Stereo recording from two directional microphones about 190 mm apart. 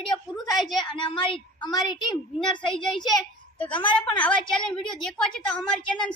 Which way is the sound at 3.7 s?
25° left (ahead or behind).